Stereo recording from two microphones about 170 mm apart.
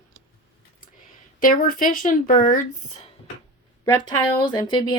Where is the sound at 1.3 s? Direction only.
55° left (ahead or behind).